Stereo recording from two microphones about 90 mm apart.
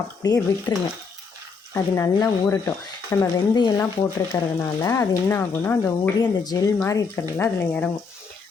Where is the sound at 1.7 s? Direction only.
40° left (ahead or behind).